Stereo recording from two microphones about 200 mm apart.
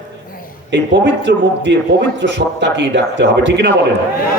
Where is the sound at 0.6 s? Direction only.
60° right (ahead or behind).